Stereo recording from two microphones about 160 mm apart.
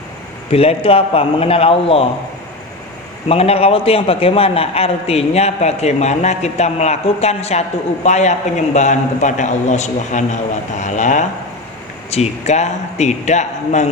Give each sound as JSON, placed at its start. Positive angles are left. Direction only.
{"t": 0.5, "sound": "a man's voice", "side_deg": 40}
{"t": 3.2, "sound": "a man's voice", "side_deg": 40}